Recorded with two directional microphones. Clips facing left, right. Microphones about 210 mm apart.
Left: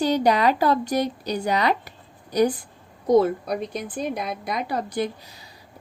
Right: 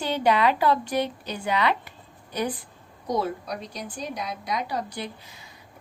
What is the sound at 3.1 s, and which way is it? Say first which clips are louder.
A woman's voice: left 9 dB; 50° left (ahead or behind).